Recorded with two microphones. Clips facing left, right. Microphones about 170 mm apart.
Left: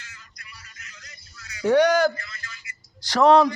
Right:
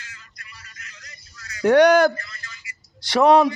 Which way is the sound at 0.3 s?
60° right (ahead or behind).